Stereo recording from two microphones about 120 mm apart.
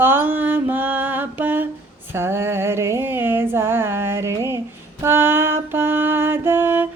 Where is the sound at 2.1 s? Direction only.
20° right (ahead or behind).